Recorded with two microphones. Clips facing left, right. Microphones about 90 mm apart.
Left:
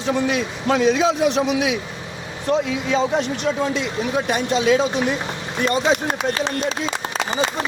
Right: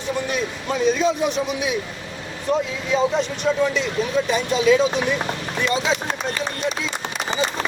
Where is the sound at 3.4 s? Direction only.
60° left (ahead or behind).